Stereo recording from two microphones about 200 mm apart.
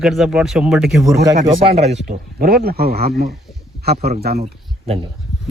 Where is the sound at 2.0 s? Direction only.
50° right (ahead or behind).